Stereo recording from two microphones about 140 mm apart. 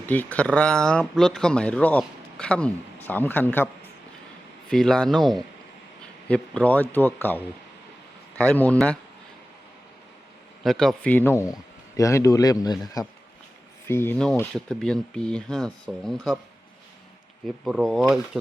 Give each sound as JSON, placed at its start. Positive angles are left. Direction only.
{"t": 0.0, "sound": "speech", "side_deg": 10}
{"t": 4.7, "sound": "speech", "side_deg": 5}
{"t": 10.6, "sound": "speech", "side_deg": 0}
{"t": 13.8, "sound": "speech", "side_deg": 15}
{"t": 14.5, "sound": "speech", "side_deg": 5}
{"t": 17.4, "sound": "speech", "side_deg": 0}